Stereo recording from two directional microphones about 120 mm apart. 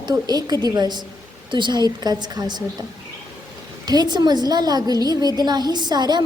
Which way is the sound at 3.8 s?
35° right (ahead or behind).